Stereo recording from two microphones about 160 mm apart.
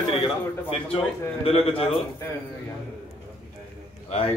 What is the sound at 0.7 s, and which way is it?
A man's voice, 35° left (ahead or behind).